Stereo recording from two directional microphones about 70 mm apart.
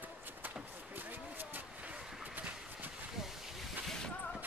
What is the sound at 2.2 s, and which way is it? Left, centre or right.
Horse, right.